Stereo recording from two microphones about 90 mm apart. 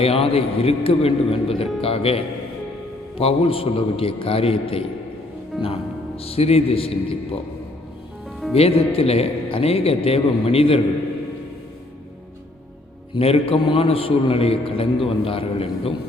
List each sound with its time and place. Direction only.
0.0 s a man's voice: 90° left
5.5 s music: centre (ahead or behind)
6.1 s a man's voice: 90° left
8.5 s a man's voice: 90° left
13.1 s a man's voice: 90° left